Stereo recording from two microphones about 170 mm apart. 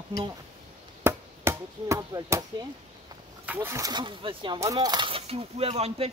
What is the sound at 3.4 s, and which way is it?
Speech, 10° right (ahead or behind).